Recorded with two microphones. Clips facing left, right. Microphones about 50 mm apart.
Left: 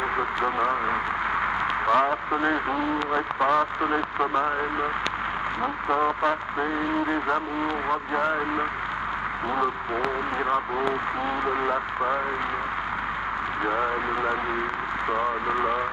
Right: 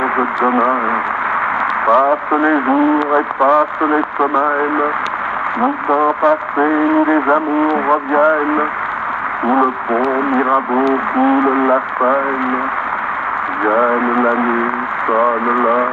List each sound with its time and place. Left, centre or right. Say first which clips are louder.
0.2 s speech: right 12 dB; right
1.9 s speech: right 10 dB; right
13.7 s speech: right 13 dB; right